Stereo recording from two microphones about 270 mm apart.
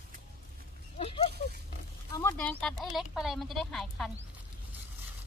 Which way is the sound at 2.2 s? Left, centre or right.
Centre.